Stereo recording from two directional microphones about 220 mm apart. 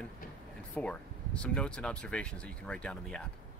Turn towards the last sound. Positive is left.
turn(degrees=5)  # may be behind; listen again after turning